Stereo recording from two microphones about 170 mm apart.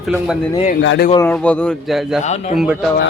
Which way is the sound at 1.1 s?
15° left (ahead or behind).